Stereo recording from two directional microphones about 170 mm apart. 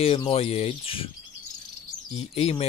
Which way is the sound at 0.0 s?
35° left (ahead or behind).